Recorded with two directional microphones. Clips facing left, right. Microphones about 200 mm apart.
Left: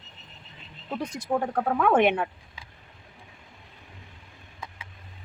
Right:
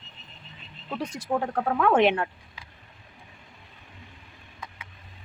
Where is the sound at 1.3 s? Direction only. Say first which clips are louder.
Left 1 dB; centre (ahead or behind).